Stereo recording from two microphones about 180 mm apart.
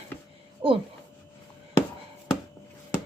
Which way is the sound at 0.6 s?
30° right (ahead or behind).